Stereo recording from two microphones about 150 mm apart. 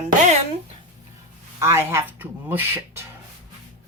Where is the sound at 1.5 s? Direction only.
15° right (ahead or behind).